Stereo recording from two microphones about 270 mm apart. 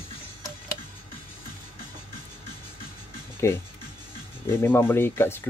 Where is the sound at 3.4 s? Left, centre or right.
Centre.